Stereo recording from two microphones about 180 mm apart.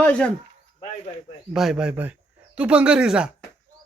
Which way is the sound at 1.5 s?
Centre (ahead or behind).